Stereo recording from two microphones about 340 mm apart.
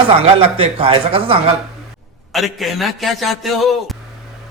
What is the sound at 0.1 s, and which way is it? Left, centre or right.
Speech, centre.